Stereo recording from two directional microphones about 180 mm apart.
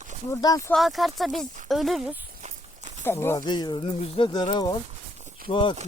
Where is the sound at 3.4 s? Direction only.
25° left (ahead or behind).